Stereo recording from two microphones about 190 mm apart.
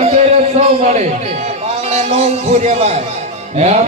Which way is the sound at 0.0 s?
35° right (ahead or behind).